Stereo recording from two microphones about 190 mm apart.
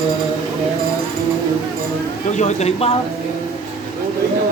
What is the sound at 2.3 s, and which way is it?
Speech, 35° left (ahead or behind).